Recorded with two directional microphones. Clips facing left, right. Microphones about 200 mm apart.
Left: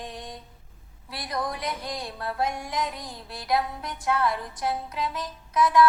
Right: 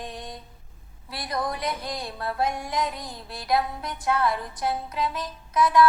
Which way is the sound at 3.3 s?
35° right (ahead or behind).